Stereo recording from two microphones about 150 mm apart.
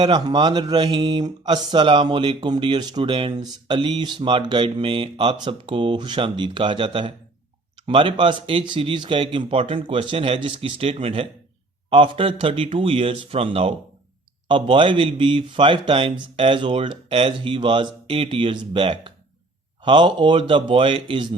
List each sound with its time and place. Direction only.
0.0 s speech: 30° right (ahead or behind)